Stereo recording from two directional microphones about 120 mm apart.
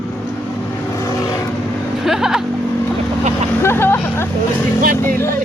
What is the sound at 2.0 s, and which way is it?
Vehicle, 5° right (ahead or behind).